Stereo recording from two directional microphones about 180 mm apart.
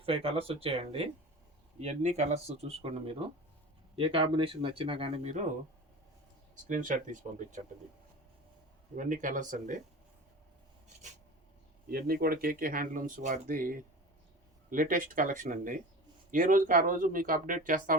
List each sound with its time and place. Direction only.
0.0 s speech: 30° right (ahead or behind)
6.7 s speech: 45° right (ahead or behind)
9.0 s speech: 45° right (ahead or behind)
11.9 s speech: 55° right (ahead or behind)